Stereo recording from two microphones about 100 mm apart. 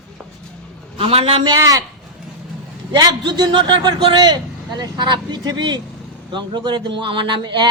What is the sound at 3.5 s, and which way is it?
Speech, 50° right (ahead or behind).